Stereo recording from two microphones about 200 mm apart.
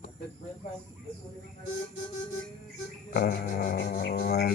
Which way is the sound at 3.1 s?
45° left (ahead or behind).